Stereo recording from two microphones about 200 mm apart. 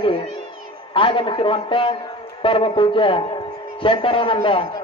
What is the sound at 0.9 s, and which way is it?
A man's voice, 25° left (ahead or behind).